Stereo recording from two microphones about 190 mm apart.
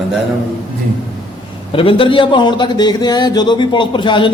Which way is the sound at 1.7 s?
30° left (ahead or behind).